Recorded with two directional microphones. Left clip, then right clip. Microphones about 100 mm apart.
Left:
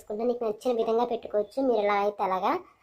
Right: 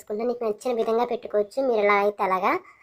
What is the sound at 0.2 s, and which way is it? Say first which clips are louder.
Speech: right 1 dB; 50° right (ahead or behind).